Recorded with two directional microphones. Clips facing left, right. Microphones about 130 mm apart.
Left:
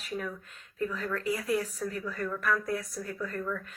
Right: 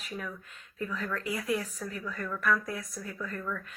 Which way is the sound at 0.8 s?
40° left (ahead or behind).